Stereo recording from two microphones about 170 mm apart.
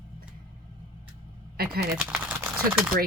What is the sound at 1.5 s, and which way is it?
Speech, 65° right (ahead or behind).